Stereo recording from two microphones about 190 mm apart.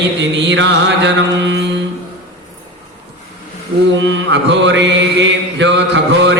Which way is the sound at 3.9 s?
70° right (ahead or behind).